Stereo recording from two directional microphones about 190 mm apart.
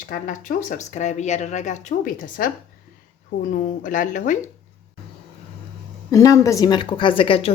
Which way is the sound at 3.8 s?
45° left (ahead or behind).